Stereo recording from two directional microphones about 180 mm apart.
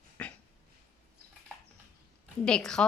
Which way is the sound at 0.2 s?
5° left (ahead or behind).